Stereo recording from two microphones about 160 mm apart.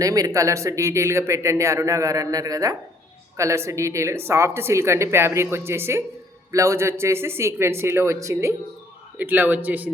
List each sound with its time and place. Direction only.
0.0 s speech: 20° right (ahead or behind)